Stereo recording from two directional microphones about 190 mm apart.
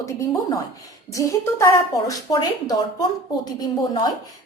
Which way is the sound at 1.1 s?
15° left (ahead or behind).